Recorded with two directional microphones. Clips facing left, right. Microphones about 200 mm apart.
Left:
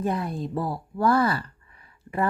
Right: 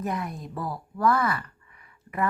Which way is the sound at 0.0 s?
30° left (ahead or behind).